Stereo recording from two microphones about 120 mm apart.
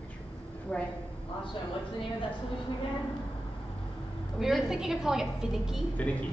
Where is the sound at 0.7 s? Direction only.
5° left (ahead or behind).